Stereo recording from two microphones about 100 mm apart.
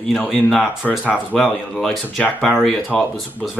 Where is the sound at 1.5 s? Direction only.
5° left (ahead or behind).